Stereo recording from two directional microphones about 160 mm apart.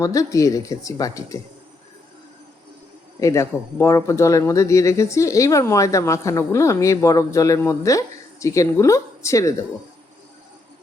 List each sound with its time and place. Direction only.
0.0 s speech: 20° left (ahead or behind)
3.2 s speech: 20° left (ahead or behind)